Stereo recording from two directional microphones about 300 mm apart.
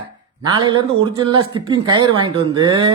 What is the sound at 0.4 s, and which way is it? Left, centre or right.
Speech, centre.